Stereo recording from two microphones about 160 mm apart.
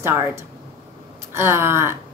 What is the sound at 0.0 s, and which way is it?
Speech, 15° right (ahead or behind).